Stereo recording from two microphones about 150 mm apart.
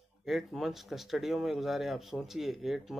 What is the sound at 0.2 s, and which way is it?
Speech, centre (ahead or behind).